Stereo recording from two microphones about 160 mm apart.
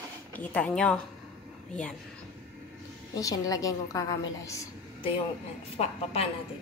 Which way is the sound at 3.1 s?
20° left (ahead or behind).